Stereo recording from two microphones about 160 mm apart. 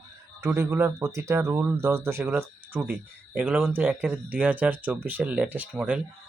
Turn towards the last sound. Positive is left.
turn(degrees=-10)  # may be behind; listen again after turning